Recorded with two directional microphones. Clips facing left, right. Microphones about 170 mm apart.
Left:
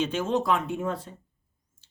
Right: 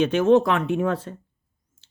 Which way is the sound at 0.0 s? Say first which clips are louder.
Right 9 dB; 65° right (ahead or behind).